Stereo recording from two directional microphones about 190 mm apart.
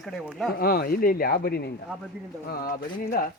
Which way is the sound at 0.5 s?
55° left (ahead or behind).